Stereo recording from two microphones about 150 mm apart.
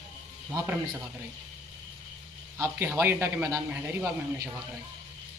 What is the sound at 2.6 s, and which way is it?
A man's voice, 15° right (ahead or behind).